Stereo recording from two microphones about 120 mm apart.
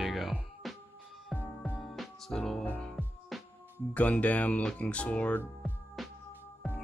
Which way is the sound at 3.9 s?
10° left (ahead or behind).